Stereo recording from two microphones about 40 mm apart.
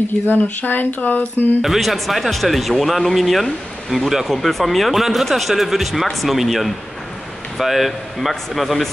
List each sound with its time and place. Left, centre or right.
0.3 s speech: left
1.6 s speech: centre